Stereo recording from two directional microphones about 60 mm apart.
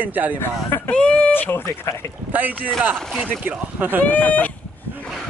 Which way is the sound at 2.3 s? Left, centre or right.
Right.